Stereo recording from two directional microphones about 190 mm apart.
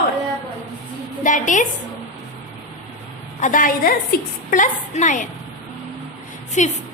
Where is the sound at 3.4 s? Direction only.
45° left (ahead or behind).